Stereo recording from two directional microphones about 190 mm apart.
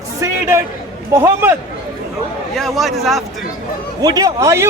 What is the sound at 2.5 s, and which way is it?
Speech, centre (ahead or behind).